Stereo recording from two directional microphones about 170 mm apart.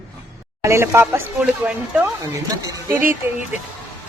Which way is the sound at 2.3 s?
20° right (ahead or behind).